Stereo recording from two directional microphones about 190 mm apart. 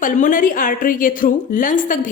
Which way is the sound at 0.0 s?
45° left (ahead or behind).